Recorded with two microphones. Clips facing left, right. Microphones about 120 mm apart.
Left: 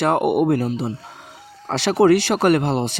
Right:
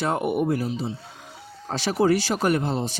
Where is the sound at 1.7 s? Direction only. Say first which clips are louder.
Left 6 dB; 75° left (ahead or behind).